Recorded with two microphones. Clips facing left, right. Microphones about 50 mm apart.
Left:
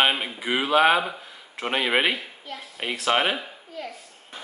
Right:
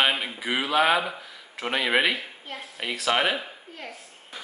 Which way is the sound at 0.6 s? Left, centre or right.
Left.